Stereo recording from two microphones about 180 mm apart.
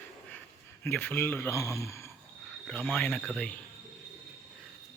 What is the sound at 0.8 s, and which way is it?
Speech, 10° left (ahead or behind).